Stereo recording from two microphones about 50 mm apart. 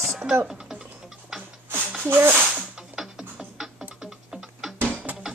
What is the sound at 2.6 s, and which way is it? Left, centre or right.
Music, centre.